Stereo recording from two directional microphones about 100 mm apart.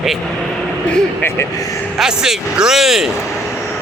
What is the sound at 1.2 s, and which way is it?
Speech, 25° left (ahead or behind).